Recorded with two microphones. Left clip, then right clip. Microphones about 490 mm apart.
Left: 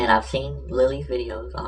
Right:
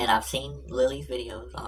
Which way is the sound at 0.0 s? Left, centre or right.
Right.